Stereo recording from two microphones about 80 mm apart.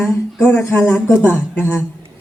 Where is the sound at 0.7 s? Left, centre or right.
Left.